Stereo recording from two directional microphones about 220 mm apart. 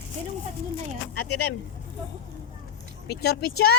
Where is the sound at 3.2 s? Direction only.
45° left (ahead or behind).